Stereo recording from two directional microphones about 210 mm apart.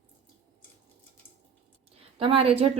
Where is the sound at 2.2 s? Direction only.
25° right (ahead or behind).